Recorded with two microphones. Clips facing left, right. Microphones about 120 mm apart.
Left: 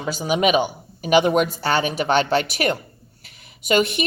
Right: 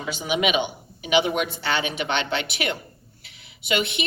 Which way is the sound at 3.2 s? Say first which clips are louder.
Left 5 dB; 45° left (ahead or behind).